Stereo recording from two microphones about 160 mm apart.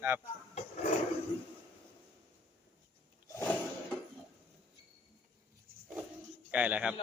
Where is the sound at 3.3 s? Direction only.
20° left (ahead or behind).